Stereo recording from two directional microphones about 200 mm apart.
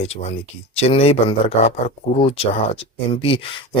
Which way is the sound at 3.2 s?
25° left (ahead or behind).